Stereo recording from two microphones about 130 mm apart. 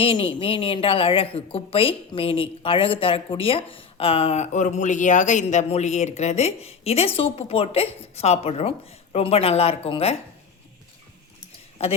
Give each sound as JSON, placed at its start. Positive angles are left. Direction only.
{"t": 0.0, "sound": "a woman's voice", "side_deg": 45}
{"t": 11.8, "sound": "a woman's voice", "side_deg": 50}